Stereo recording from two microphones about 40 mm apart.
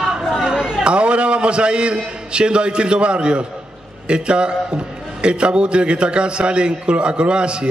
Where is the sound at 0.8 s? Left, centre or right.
Right.